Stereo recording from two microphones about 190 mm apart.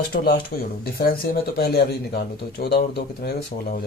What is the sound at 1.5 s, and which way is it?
Speech, 60° left (ahead or behind).